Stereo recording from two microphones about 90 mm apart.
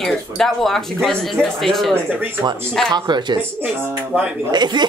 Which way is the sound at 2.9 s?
55° right (ahead or behind).